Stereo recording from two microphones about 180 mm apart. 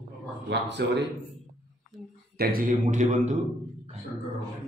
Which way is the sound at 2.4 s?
50° right (ahead or behind).